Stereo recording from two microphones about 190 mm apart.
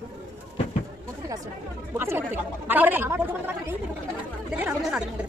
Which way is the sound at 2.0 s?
10° right (ahead or behind).